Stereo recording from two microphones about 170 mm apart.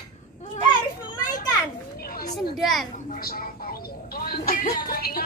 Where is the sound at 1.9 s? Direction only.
60° left (ahead or behind).